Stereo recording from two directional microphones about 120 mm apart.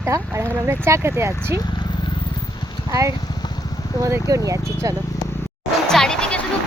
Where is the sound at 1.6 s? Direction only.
35° left (ahead or behind).